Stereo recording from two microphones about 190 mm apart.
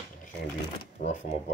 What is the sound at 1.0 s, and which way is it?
Speech, 40° left (ahead or behind).